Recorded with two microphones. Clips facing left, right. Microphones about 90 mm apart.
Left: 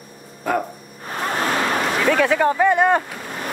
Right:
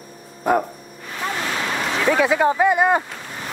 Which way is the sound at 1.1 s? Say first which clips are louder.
Left 3 dB; 45° left (ahead or behind).